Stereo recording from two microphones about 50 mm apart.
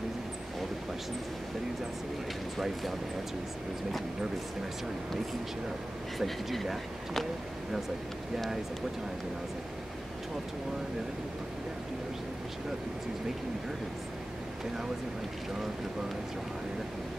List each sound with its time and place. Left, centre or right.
2.6 s speech: centre
6.1 s speech: centre